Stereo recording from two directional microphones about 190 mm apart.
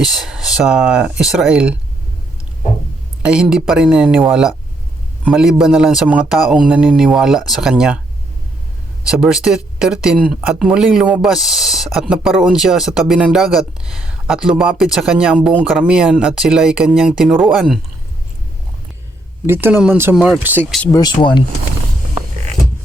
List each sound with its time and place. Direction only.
0.0 s speech: centre (ahead or behind)
3.2 s speech: 5° right (ahead or behind)
9.0 s speech: 5° right (ahead or behind)
19.5 s speech: 10° right (ahead or behind)
20.9 s speech: 20° left (ahead or behind)